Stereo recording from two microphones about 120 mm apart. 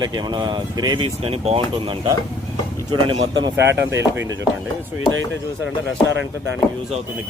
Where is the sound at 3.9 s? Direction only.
20° right (ahead or behind).